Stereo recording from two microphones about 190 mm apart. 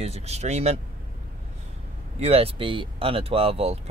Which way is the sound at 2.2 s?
30° right (ahead or behind).